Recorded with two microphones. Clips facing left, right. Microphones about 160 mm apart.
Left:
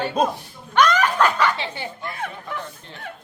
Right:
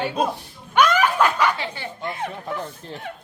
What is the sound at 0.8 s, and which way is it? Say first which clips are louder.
Snicker: even; 10° right (ahead or behind).